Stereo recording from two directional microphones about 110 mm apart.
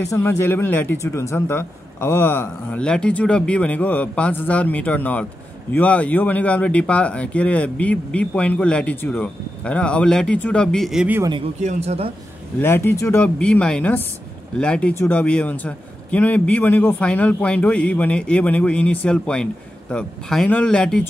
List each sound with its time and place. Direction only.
0.1 s speech: 20° left (ahead or behind)
2.8 s a man's voice: 10° left (ahead or behind)
11.6 s speech: 75° right (ahead or behind)
12.5 s speech: 20° left (ahead or behind)
13.2 s a man's voice: 10° left (ahead or behind)